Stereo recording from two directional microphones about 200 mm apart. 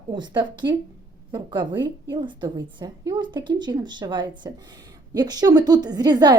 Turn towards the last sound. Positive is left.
turn(degrees=-20)  # may be behind; listen again after turning